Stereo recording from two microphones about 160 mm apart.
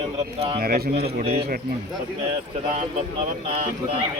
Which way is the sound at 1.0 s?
85° right.